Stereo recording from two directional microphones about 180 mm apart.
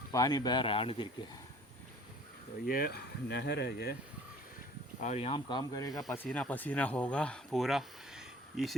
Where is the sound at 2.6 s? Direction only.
55° left (ahead or behind).